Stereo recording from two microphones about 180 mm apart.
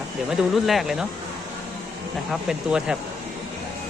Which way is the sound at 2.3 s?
5° right (ahead or behind).